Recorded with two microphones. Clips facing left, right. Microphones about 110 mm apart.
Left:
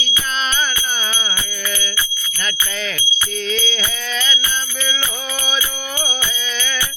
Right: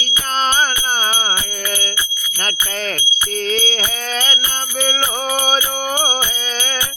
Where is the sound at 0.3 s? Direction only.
45° right (ahead or behind).